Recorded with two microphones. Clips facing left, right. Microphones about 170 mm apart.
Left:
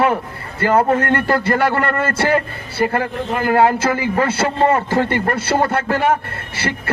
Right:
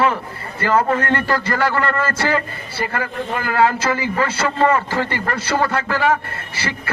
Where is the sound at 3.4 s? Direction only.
55° left (ahead or behind).